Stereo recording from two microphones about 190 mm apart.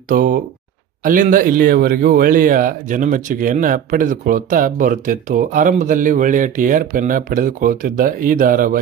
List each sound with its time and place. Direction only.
0.1 s a man's voice: 45° right (ahead or behind)